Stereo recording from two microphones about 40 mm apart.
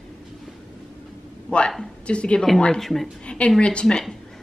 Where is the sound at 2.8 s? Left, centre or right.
Centre.